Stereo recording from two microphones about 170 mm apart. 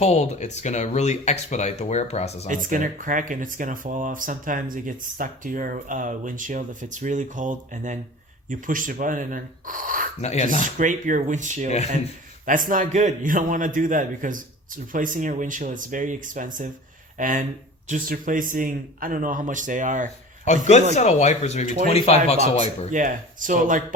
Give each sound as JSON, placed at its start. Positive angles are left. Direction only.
{"t": 0.0, "sound": "speech", "side_deg": 40}
{"t": 2.5, "sound": "speech", "side_deg": -50}
{"t": 10.2, "sound": "speech", "side_deg": 40}
{"t": 10.8, "sound": "speech", "side_deg": -50}
{"t": 20.4, "sound": "a man's voice", "side_deg": 45}
{"t": 22.9, "sound": "speech", "side_deg": -50}